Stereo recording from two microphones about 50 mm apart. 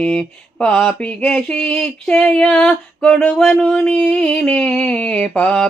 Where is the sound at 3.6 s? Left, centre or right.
Left.